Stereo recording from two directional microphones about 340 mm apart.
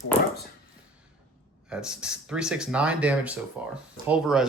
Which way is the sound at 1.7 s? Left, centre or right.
Centre.